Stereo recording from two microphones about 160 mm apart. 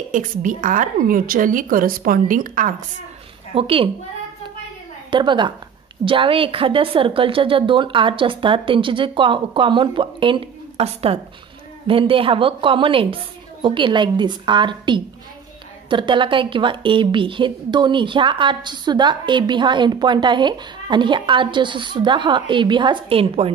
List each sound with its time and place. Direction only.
0.1 s a woman's voice: 55° right (ahead or behind)
3.5 s a woman's voice: 35° right (ahead or behind)
5.1 s a woman's voice: 30° right (ahead or behind)